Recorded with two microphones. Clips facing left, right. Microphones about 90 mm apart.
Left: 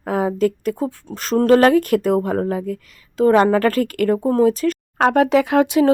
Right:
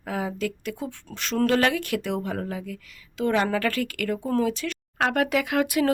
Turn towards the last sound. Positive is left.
turn(degrees=25)  # may be behind; listen again after turning